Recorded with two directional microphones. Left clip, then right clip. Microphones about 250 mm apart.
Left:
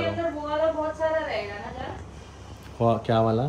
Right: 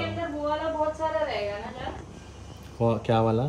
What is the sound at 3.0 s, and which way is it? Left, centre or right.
Speech, left.